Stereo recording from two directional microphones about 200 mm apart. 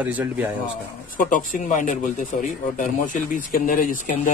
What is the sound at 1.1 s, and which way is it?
Speech, 40° left (ahead or behind).